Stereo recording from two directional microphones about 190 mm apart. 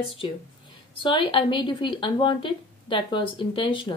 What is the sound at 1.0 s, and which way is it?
Speech, 25° left (ahead or behind).